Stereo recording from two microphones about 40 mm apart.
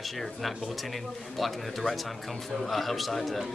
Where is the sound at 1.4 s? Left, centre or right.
Centre.